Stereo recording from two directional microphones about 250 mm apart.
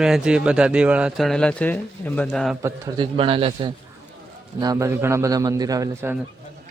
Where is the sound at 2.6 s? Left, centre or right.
Centre.